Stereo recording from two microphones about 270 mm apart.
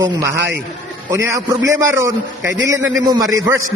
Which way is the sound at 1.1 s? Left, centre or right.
Centre.